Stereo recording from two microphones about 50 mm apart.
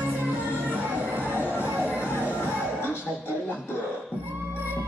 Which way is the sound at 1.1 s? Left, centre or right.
Right.